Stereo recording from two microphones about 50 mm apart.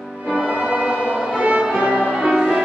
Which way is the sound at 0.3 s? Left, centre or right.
Right.